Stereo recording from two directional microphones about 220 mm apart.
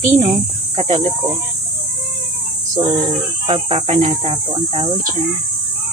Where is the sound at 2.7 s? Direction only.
30° right (ahead or behind).